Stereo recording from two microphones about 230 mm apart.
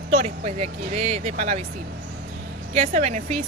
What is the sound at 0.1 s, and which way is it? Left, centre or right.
Speech, right.